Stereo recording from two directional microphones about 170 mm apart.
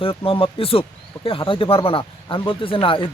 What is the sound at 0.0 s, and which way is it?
Speech, 30° left (ahead or behind).